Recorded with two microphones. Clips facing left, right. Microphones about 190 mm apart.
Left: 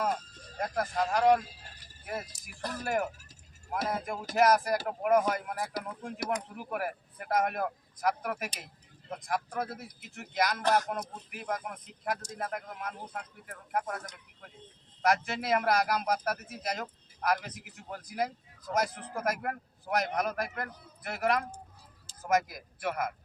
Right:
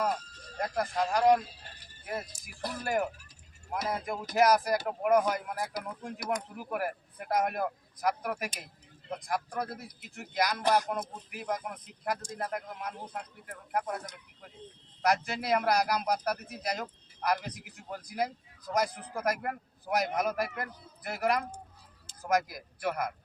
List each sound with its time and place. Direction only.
0.6 s speech: centre (ahead or behind)
2.6 s speech: 10° right (ahead or behind)
3.7 s speech: centre (ahead or behind)
10.6 s speech: 15° right (ahead or behind)
11.3 s speech: centre (ahead or behind)
15.0 s speech: centre (ahead or behind)